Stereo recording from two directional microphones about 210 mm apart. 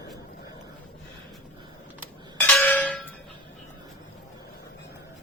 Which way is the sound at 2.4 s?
10° left (ahead or behind).